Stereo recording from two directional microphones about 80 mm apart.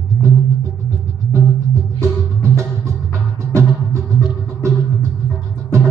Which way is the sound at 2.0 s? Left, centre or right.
Right.